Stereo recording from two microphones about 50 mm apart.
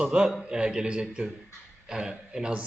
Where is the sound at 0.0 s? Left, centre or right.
Right.